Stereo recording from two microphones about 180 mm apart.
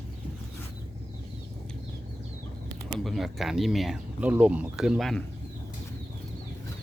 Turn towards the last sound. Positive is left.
turn(degrees=0)  # may be behind; listen again after turning